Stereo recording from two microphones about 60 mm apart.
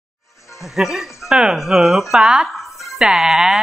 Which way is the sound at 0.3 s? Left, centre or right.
Left.